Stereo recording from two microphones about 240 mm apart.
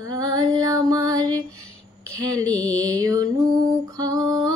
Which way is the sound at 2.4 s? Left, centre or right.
Centre.